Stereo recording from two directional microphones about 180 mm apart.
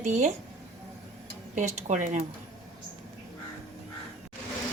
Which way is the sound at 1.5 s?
45° right (ahead or behind).